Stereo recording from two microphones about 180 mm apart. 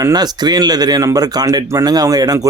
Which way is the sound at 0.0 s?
20° right (ahead or behind).